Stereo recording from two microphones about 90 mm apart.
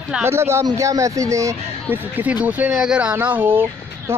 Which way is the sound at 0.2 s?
30° right (ahead or behind).